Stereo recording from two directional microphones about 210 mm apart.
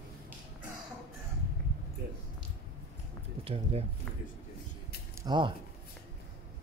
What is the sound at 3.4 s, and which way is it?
Speech, 30° right (ahead or behind).